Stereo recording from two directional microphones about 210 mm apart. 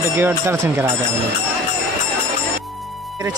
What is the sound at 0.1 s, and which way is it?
Speech, 10° right (ahead or behind).